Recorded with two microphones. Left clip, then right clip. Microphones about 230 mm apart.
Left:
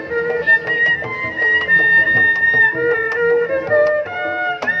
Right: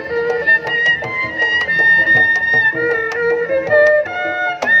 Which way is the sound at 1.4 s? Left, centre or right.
Right.